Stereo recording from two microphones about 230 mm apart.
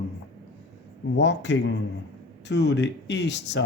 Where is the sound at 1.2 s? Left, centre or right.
Left.